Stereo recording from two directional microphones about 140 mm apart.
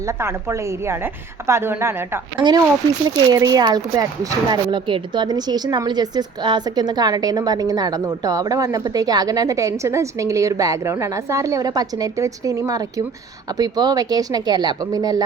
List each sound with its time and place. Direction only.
0.0 s speech: 20° right (ahead or behind)
2.4 s speech: 30° right (ahead or behind)